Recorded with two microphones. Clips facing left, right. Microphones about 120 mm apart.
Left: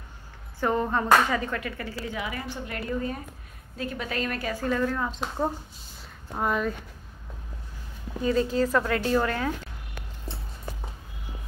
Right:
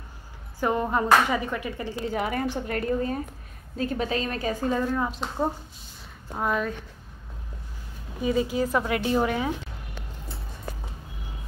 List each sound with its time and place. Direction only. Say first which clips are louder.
0.6 s speech: right 1 dB; 15° right (ahead or behind)
2.0 s a woman's voice: right 8 dB; 45° right (ahead or behind)
4.1 s a woman's voice: right 2 dB; 25° right (ahead or behind)
6.3 s speech: even; centre (ahead or behind)
8.2 s speech: left 1 dB; 10° right (ahead or behind)